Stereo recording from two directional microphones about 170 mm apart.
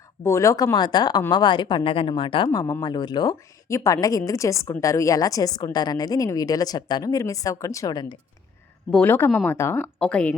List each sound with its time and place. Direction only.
0.2 s speech: 15° left (ahead or behind)
9.0 s speech: 10° left (ahead or behind)